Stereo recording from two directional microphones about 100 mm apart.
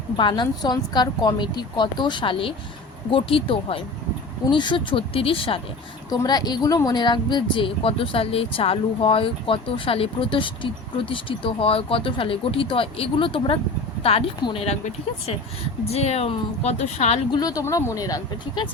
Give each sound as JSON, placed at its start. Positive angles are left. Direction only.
{"t": 0.2, "sound": "a woman's voice", "side_deg": 55}
{"t": 4.5, "sound": "speech", "side_deg": 55}
{"t": 6.1, "sound": "speech", "side_deg": 45}
{"t": 14.0, "sound": "speech", "side_deg": 80}
{"t": 15.9, "sound": "a woman's voice", "side_deg": 90}
{"t": 17.4, "sound": "speech", "side_deg": 35}